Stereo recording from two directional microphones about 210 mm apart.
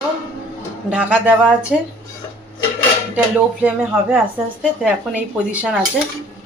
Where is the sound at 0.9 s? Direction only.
5° right (ahead or behind).